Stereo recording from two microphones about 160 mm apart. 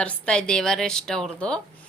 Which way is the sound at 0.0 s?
5° left (ahead or behind).